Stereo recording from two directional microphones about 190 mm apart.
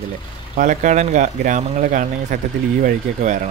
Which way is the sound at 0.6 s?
40° right (ahead or behind).